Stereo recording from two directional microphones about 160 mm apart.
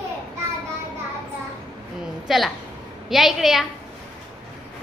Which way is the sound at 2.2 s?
Centre (ahead or behind).